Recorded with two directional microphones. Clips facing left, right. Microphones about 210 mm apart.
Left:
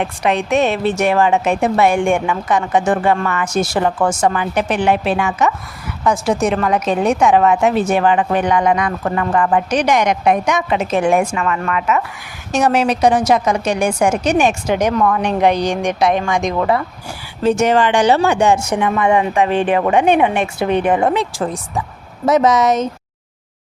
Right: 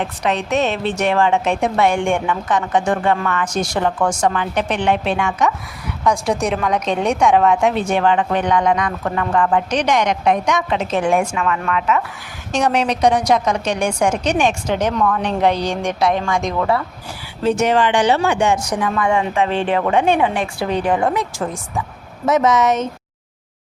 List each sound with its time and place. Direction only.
0.0 s a woman's voice: 10° left (ahead or behind)
17.6 s speech: 45° left (ahead or behind)
18.5 s a woman's voice: 25° left (ahead or behind)